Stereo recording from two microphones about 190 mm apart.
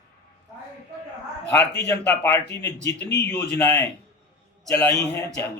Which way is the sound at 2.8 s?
60° left (ahead or behind).